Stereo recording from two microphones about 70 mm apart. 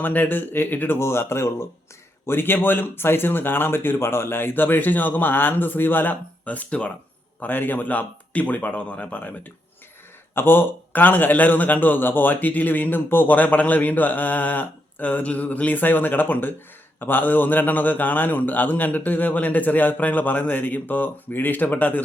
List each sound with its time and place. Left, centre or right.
0.0 s a man's voice: left
10.3 s a man's voice: left